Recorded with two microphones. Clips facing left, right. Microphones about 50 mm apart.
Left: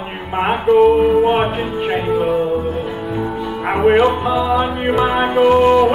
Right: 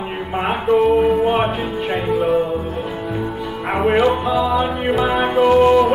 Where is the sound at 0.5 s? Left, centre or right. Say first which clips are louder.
Left 4 dB; centre.